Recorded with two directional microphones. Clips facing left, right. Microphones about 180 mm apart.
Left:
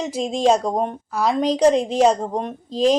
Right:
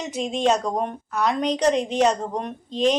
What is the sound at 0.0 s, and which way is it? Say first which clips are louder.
A woman's voice: left 3 dB; 30° left (ahead or behind).